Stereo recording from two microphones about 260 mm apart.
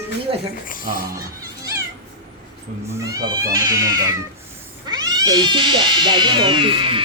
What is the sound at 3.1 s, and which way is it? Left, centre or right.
Speech, centre.